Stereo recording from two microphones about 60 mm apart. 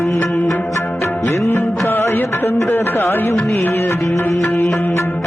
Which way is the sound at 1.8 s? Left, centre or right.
Left.